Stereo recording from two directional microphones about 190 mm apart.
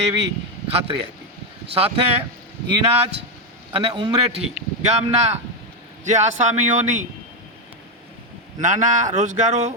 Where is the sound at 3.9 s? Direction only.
20° right (ahead or behind).